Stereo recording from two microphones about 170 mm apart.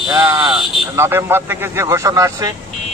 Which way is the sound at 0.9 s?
15° right (ahead or behind).